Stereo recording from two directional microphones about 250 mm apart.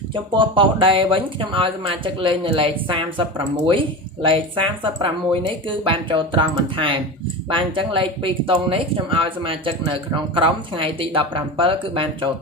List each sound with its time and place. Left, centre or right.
0.1 s speech: centre